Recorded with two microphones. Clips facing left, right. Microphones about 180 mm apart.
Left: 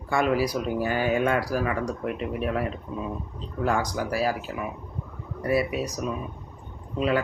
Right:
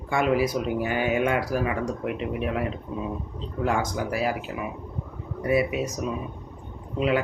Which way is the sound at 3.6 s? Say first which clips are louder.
Even; 20° right (ahead or behind).